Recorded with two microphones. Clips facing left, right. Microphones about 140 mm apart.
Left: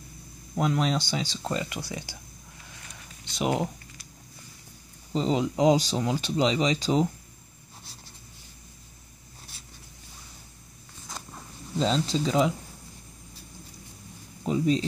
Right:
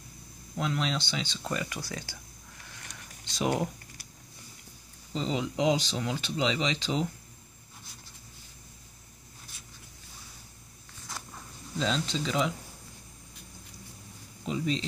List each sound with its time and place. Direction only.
0.7 s speech: 45° left (ahead or behind)
1.4 s speech: 25° left (ahead or behind)
3.3 s speech: 20° left (ahead or behind)
5.1 s speech: 40° left (ahead or behind)
11.1 s a sound: 20° left (ahead or behind)
11.8 s speech: 35° left (ahead or behind)
14.4 s a sound: 40° left (ahead or behind)